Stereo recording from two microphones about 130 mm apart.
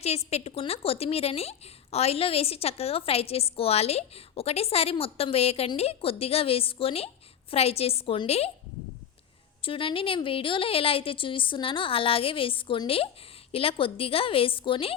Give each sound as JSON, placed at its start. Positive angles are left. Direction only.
{"t": 0.3, "sound": "a woman's voice", "side_deg": 55}
{"t": 9.6, "sound": "a woman's voice", "side_deg": 45}